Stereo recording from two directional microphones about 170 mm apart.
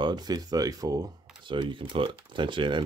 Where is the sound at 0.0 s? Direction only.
25° right (ahead or behind).